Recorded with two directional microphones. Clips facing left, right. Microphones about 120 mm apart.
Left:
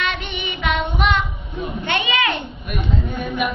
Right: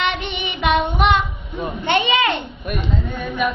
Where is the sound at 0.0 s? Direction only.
20° right (ahead or behind).